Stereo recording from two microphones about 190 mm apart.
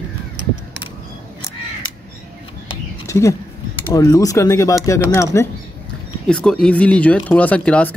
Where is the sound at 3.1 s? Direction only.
15° left (ahead or behind).